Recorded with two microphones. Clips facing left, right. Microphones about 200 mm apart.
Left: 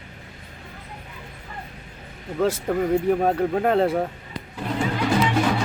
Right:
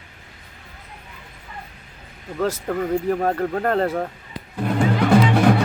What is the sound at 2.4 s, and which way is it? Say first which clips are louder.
Speech: left 1 dB; 5° left (ahead or behind).